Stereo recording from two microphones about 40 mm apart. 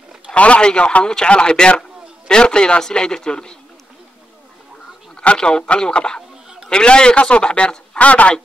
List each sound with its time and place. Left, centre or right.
0.3 s a man's voice: left
5.4 s a man's voice: left